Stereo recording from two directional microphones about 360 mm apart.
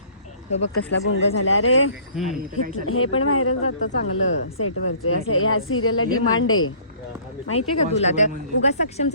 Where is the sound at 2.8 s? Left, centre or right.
Left.